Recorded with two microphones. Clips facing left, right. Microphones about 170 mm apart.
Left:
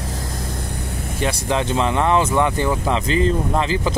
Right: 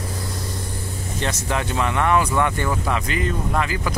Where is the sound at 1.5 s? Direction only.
25° left (ahead or behind).